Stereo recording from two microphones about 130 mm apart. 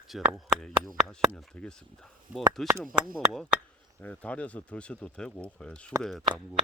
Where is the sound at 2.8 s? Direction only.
Centre (ahead or behind).